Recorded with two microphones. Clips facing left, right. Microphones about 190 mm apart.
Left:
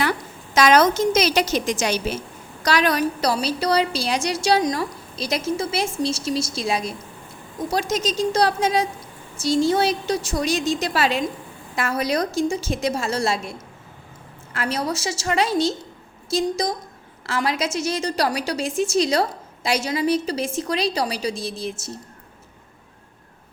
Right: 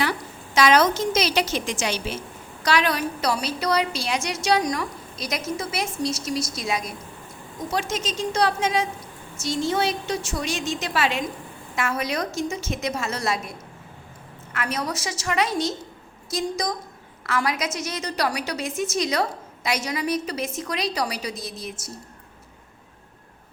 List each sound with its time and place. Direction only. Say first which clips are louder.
0.5 s a woman's voice: left 2 dB; 45° left (ahead or behind); by 21.9 s 25° left (ahead or behind)